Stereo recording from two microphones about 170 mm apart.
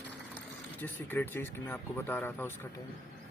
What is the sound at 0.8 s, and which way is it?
Speech, 10° left (ahead or behind).